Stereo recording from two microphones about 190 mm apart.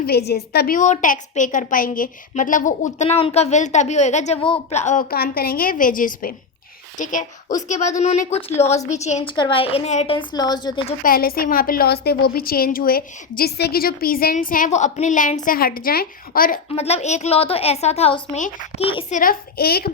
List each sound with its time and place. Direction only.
0.0 s a woman's voice: 55° left (ahead or behind)
0.8 s a woman's voice: 40° left (ahead or behind)
9.3 s a woman's voice: 25° left (ahead or behind)
11.0 s a woman's voice: 50° left (ahead or behind)
16.7 s a woman's voice: 35° left (ahead or behind)
19.1 s a woman's voice: 50° left (ahead or behind)